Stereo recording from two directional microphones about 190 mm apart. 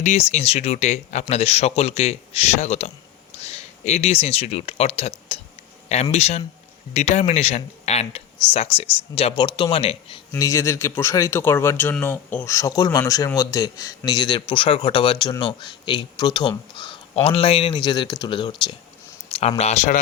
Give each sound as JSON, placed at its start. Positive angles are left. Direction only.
{"t": 0.0, "sound": "speech", "side_deg": 35}
{"t": 10.3, "sound": "speech", "side_deg": 15}